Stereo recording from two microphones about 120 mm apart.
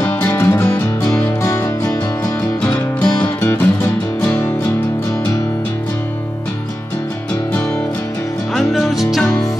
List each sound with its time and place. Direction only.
0.0 s music: 20° left (ahead or behind)
8.5 s music: centre (ahead or behind)